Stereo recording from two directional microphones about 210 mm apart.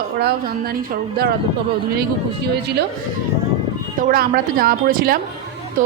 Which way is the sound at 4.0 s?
45° right (ahead or behind).